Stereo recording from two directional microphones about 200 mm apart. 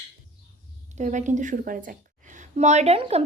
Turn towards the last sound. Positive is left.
turn(degrees=-30)  # may be behind; listen again after turning